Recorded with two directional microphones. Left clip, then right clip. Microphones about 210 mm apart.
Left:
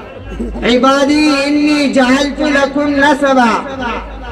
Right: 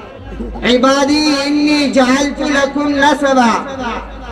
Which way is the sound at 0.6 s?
35° right (ahead or behind).